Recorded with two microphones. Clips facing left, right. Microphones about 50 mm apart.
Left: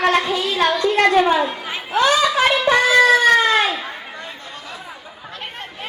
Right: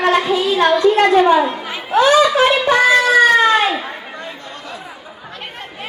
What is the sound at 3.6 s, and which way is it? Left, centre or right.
Chatter, centre.